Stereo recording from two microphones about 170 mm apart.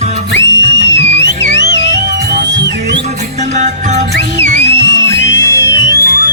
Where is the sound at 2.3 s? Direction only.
85° right.